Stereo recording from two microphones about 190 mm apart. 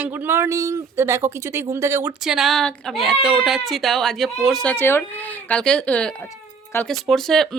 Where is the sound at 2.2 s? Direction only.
Centre (ahead or behind).